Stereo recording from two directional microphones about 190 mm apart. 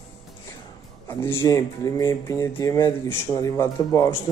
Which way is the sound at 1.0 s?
10° left (ahead or behind).